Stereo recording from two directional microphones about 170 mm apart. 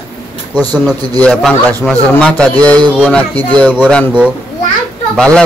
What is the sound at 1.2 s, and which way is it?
Speech, centre (ahead or behind).